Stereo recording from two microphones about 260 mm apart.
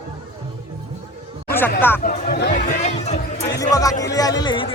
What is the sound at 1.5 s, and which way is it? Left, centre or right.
Speech, centre.